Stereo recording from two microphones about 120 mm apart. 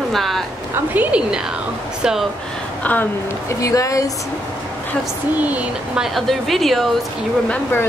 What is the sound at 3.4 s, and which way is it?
Speech, 25° left (ahead or behind).